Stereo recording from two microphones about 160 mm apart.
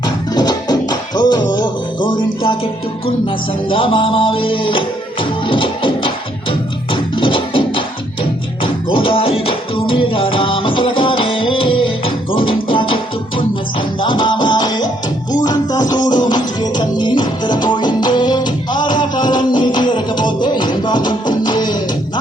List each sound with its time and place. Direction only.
0.0 s music: 25° left (ahead or behind)
3.7 s music: 35° left (ahead or behind)